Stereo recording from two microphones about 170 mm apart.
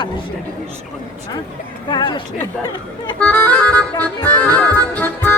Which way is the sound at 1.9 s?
25° left (ahead or behind).